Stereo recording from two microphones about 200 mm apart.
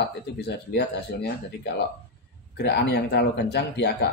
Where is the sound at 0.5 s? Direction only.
55° left (ahead or behind).